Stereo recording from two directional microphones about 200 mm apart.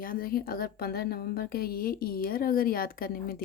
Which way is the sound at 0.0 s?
45° left (ahead or behind).